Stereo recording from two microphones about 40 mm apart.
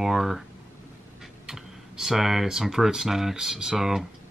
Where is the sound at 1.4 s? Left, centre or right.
Centre.